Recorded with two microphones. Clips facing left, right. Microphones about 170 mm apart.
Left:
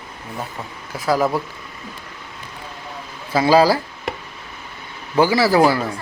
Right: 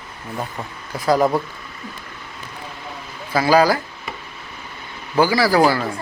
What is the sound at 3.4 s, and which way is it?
Speech, 25° left (ahead or behind).